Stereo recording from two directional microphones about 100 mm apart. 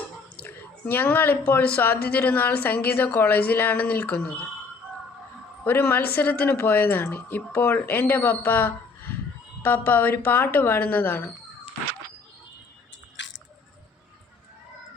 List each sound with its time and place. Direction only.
0.4 s a woman's voice: 20° left (ahead or behind)
5.6 s a woman's voice: 20° left (ahead or behind)